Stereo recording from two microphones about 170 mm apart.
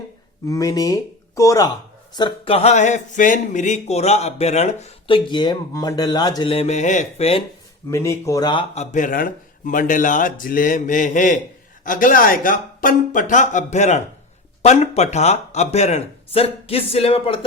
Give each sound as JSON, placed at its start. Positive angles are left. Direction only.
{"t": 0.4, "sound": "speech", "side_deg": 20}
{"t": 7.9, "sound": "speech", "side_deg": 15}
{"t": 8.7, "sound": "speech", "side_deg": 40}